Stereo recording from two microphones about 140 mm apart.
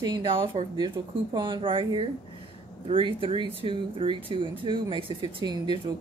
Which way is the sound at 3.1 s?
40° right (ahead or behind).